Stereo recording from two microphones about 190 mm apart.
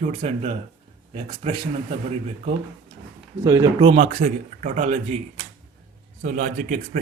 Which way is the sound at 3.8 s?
35° right (ahead or behind).